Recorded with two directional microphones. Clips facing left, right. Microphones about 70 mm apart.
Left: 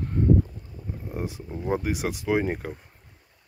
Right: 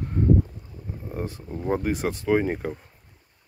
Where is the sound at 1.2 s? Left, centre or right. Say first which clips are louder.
Right 1 dB; centre.